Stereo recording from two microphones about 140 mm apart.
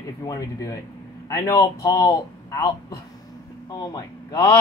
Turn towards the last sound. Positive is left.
turn(degrees=25)  # may be behind; listen again after turning